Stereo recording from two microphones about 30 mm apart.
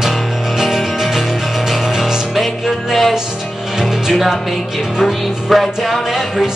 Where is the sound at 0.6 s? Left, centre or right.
Centre.